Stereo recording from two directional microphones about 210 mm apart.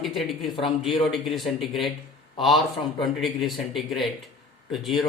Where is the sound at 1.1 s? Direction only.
Centre (ahead or behind).